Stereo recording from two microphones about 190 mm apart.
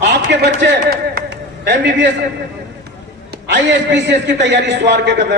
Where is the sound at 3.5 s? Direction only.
65° right (ahead or behind).